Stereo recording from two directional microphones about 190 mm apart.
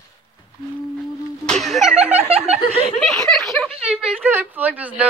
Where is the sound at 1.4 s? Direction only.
Centre (ahead or behind).